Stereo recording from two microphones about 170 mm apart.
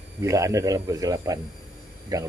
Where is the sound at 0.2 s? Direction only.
20° right (ahead or behind).